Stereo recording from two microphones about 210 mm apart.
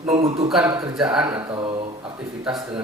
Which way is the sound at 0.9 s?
5° right (ahead or behind).